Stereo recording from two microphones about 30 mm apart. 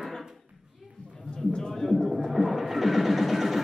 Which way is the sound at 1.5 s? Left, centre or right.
Left.